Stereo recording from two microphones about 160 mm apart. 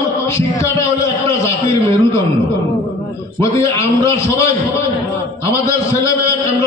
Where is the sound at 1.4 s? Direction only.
20° left (ahead or behind).